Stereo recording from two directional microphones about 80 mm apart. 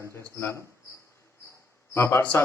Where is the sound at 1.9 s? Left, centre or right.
Left.